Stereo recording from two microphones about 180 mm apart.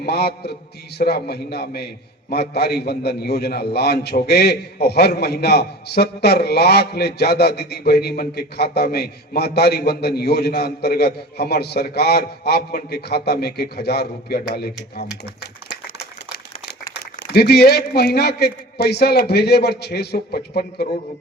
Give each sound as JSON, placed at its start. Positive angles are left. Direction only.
{"t": 0.0, "sound": "a man's voice", "side_deg": 65}
{"t": 17.3, "sound": "a man's voice", "side_deg": 65}